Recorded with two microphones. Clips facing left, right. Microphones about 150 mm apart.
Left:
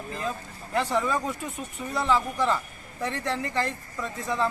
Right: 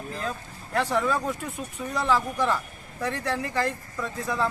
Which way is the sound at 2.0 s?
10° right (ahead or behind).